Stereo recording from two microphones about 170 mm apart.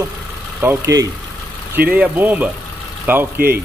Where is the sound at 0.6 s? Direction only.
15° right (ahead or behind).